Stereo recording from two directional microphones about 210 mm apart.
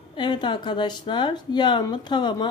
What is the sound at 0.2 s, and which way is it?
Speech, 20° left (ahead or behind).